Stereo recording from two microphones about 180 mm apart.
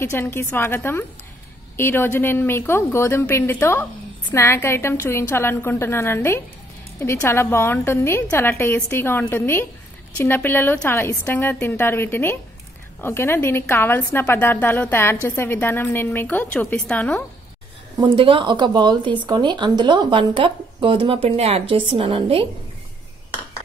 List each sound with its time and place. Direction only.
0.0 s a woman's voice: 10° left (ahead or behind)
17.9 s speech: 25° right (ahead or behind)